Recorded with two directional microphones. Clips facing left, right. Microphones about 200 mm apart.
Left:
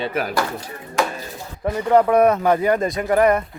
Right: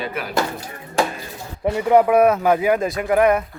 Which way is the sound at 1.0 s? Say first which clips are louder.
Right 1 dB; 30° right (ahead or behind).